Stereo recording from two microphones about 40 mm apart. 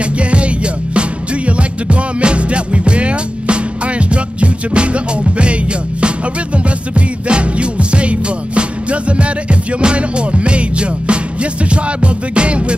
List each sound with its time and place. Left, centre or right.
0.0 s music: right